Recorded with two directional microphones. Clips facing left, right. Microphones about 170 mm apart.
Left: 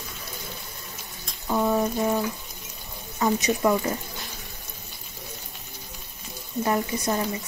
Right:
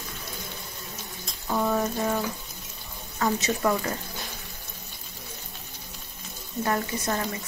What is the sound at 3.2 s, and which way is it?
Speech, 15° left (ahead or behind).